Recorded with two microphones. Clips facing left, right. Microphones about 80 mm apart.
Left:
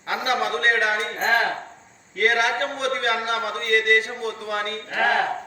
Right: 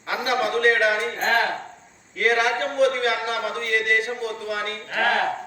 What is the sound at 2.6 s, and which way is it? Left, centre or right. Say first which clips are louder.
A man's voice: right 4 dB; left.